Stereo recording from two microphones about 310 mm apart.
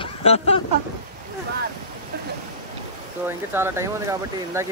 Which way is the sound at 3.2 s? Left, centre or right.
Centre.